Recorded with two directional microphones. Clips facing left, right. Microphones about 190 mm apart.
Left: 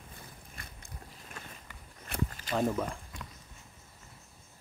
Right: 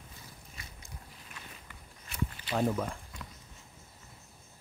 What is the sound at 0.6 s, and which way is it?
Biting, 55° left (ahead or behind).